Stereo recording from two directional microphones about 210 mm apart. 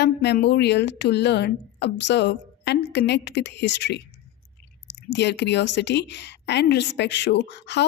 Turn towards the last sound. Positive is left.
turn(degrees=55)  # may be behind; listen again after turning